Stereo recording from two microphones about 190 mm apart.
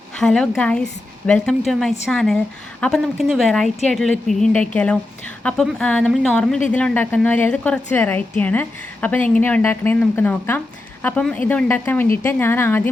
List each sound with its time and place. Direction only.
0.2 s a woman's voice: 5° left (ahead or behind)